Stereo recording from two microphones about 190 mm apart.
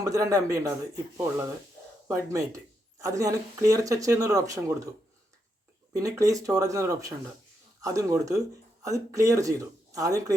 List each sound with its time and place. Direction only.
0.0 s speech: 15° right (ahead or behind)
2.0 s speech: 15° right (ahead or behind)
5.9 s speech: 15° right (ahead or behind)